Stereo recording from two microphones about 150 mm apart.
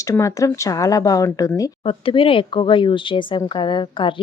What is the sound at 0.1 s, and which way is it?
Speech, 20° left (ahead or behind).